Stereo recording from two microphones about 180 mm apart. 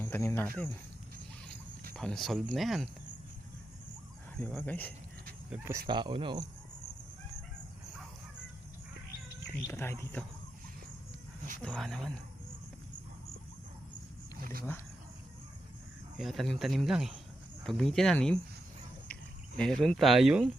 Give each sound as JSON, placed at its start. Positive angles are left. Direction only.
{"t": 0.0, "sound": "speech", "side_deg": 10}
{"t": 1.9, "sound": "speech", "side_deg": 5}
{"t": 4.4, "sound": "speech", "side_deg": 10}
{"t": 5.5, "sound": "speech", "side_deg": -15}
{"t": 5.9, "sound": "speech", "side_deg": -25}
{"t": 9.6, "sound": "speech", "side_deg": 15}
{"t": 11.6, "sound": "speech", "side_deg": 5}
{"t": 16.1, "sound": "speech", "side_deg": 0}
{"t": 19.5, "sound": "speech", "side_deg": 5}